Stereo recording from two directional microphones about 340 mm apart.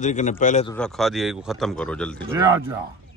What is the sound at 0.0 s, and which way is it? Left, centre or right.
Speech, left.